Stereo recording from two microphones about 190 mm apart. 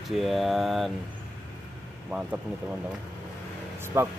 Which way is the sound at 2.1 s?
5° right (ahead or behind).